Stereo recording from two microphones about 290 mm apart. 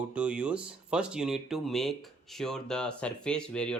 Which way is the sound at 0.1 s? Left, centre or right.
Centre.